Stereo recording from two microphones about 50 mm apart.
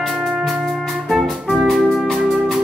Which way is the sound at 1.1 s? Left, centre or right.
Centre.